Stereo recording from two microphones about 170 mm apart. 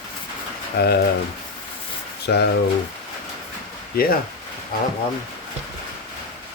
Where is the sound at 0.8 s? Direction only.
70° left (ahead or behind).